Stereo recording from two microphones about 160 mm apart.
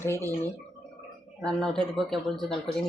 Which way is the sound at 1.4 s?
5° left (ahead or behind).